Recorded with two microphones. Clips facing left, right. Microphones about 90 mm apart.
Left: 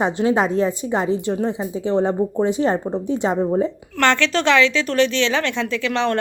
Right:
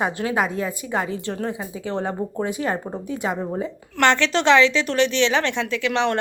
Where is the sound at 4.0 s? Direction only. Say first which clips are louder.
Left 1 dB; 20° right (ahead or behind).